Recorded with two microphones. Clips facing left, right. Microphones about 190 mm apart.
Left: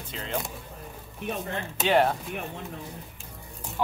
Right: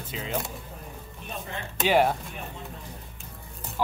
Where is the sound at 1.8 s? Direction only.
5° right (ahead or behind).